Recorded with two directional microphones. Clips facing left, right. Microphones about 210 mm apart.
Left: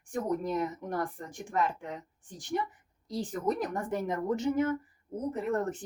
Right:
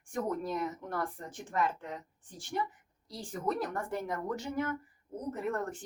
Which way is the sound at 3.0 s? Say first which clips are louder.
Left 4 dB; 20° left (ahead or behind).